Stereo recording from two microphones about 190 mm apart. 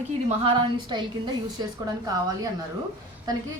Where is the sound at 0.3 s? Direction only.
25° right (ahead or behind).